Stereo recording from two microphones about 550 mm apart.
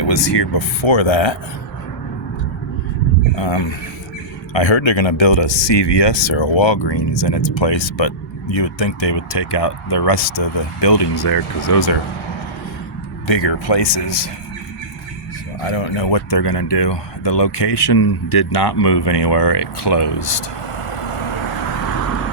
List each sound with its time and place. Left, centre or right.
0.0 s speech: left
3.3 s speech: left
13.2 s speech: left
15.7 s speech: left